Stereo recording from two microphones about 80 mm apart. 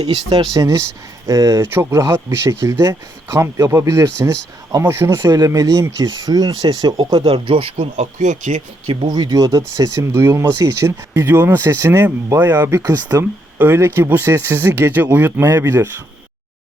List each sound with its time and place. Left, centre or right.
0.0 s speech: right
8.9 s speech: right